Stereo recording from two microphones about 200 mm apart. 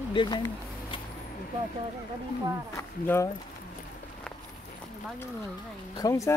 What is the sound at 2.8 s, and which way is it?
Speech, 15° left (ahead or behind).